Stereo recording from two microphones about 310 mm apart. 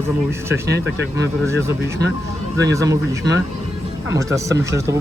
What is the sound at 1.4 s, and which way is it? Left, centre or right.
Speech, centre.